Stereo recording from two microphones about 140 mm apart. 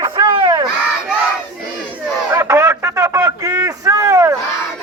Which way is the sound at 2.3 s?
20° right (ahead or behind).